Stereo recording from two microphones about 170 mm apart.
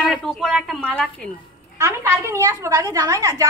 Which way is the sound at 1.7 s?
15° right (ahead or behind).